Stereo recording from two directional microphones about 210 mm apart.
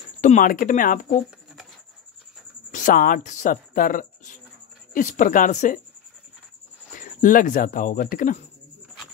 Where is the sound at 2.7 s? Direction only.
40° left (ahead or behind).